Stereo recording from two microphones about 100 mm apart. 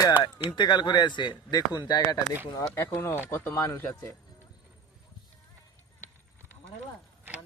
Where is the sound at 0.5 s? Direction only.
50° left (ahead or behind).